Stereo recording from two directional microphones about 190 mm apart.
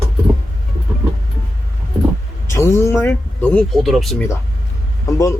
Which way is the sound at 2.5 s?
15° left (ahead or behind).